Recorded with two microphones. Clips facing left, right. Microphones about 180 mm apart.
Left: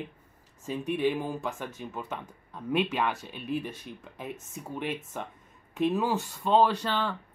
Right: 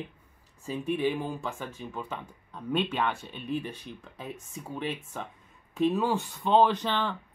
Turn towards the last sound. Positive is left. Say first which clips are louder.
# right 1 dB
turn(degrees=5)  # may be behind; listen again after turning